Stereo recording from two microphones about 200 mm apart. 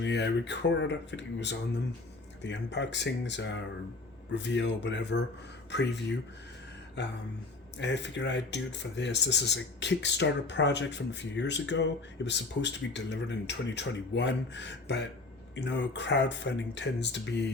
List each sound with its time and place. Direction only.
0.0 s speech: 60° left (ahead or behind)